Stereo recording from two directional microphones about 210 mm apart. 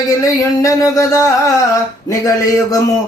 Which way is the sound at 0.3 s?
15° left (ahead or behind).